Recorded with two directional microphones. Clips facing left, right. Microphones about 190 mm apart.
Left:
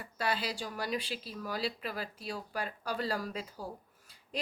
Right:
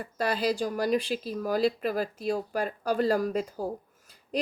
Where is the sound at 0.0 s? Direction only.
45° right (ahead or behind).